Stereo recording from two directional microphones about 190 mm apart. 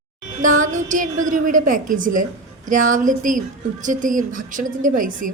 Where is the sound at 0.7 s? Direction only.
40° right (ahead or behind).